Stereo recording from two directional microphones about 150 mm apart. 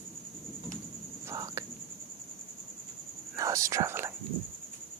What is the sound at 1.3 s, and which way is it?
Whispering, 20° right (ahead or behind).